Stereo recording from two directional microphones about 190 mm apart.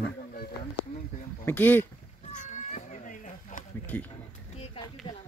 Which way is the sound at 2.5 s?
40° left (ahead or behind).